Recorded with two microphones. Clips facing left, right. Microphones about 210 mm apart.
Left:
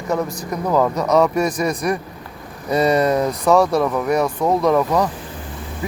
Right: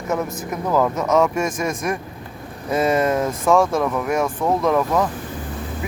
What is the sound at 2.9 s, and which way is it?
Speech, centre (ahead or behind).